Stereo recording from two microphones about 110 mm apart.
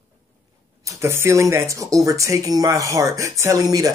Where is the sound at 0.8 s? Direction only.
25° right (ahead or behind).